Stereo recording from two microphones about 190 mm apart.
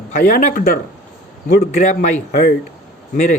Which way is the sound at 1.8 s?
40° left (ahead or behind).